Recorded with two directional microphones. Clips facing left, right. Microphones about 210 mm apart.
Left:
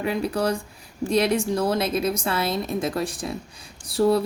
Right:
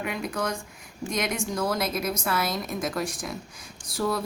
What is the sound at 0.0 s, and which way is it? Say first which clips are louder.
Speech: left 6 dB; 30° left (ahead or behind).